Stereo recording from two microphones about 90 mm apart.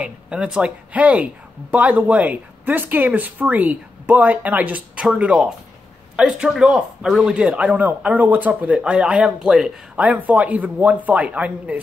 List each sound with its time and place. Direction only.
0.0 s speech: 10° right (ahead or behind)